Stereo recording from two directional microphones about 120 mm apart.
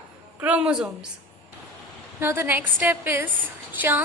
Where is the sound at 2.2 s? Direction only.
20° right (ahead or behind).